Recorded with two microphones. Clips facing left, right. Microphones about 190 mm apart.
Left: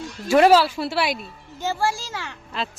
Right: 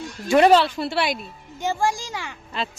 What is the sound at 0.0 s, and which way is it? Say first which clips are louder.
Speech: even; 5° left (ahead or behind).